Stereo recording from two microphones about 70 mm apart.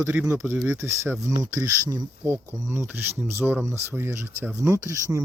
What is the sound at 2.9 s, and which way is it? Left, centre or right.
Speech, right.